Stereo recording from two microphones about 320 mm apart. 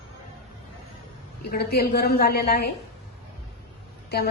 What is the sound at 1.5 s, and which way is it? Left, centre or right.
A woman's voice, left.